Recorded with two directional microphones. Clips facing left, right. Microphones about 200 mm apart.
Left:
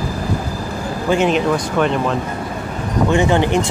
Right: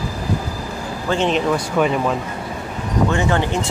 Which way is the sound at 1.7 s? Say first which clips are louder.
Right 1 dB; 5° right (ahead or behind).